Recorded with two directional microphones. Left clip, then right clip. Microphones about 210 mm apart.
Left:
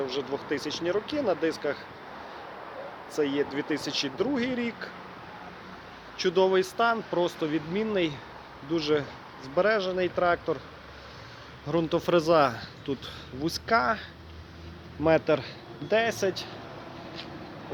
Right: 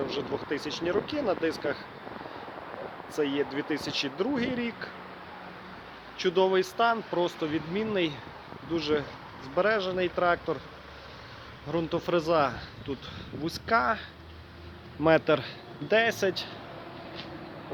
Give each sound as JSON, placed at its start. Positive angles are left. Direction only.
{"t": 0.1, "sound": "speech", "side_deg": 0}
{"t": 3.2, "sound": "speech", "side_deg": 0}
{"t": 6.1, "sound": "speech", "side_deg": 0}
{"t": 11.7, "sound": "speech", "side_deg": 20}
{"t": 15.0, "sound": "a man's voice", "side_deg": -10}